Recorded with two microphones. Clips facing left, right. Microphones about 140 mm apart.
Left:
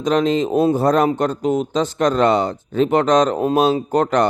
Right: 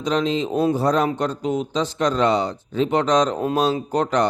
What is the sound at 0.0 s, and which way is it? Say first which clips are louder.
Speech: left 4 dB; 50° left (ahead or behind).